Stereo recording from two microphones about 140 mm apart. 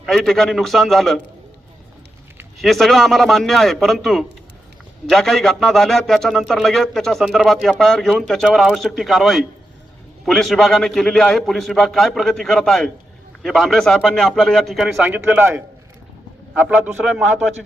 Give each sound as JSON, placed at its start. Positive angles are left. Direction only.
{"t": 0.0, "sound": "a man's voice", "side_deg": 0}
{"t": 2.6, "sound": "a man's voice", "side_deg": 0}
{"t": 15.0, "sound": "a man's voice", "side_deg": -15}